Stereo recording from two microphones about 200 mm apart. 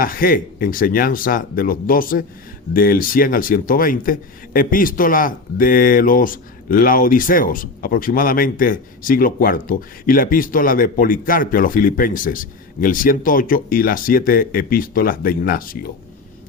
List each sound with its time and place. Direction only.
0.0 s speech: 45° left (ahead or behind)